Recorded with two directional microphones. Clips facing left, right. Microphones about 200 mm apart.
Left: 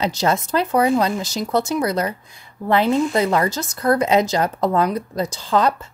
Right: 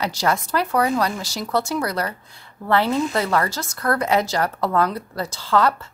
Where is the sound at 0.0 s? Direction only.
20° left (ahead or behind).